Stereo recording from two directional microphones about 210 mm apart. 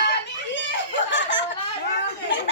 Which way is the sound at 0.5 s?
60° left (ahead or behind).